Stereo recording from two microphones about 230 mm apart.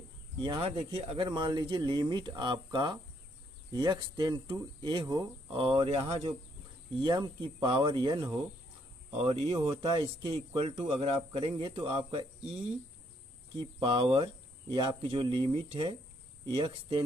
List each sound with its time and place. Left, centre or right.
0.4 s speech: right